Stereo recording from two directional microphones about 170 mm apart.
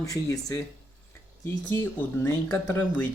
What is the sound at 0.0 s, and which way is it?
Speech, 20° left (ahead or behind).